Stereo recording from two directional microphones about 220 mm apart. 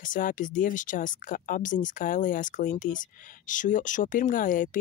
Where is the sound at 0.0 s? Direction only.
35° left (ahead or behind).